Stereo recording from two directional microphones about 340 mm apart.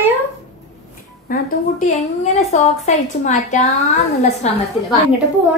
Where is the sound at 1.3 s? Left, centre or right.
Left.